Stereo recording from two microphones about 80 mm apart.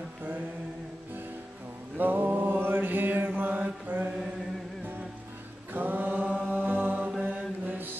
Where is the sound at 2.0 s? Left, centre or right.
Right.